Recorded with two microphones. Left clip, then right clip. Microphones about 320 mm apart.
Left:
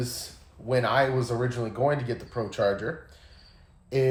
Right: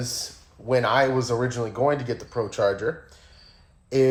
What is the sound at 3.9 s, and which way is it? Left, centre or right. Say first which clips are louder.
Speech: right 5 dB; right.